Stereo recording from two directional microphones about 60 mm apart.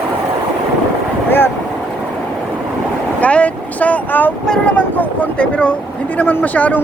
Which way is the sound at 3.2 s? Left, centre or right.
Left.